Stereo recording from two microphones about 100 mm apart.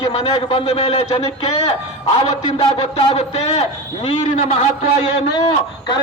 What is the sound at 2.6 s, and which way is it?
Speech, 65° left (ahead or behind).